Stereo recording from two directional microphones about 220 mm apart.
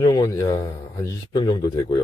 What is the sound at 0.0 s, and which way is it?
Speech, 15° left (ahead or behind).